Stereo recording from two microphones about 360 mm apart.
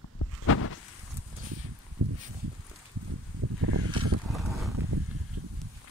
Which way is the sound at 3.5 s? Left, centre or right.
Right.